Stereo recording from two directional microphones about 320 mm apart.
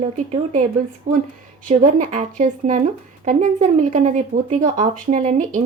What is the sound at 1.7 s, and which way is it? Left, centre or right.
Speech, right.